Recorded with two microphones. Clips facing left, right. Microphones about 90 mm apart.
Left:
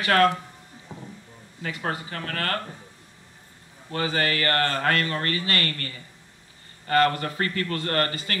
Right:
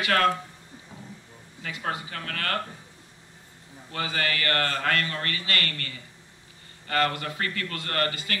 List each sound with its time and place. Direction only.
0.0 s speech: 40° left (ahead or behind)
1.6 s speech: 40° left (ahead or behind)
3.9 s speech: 35° left (ahead or behind)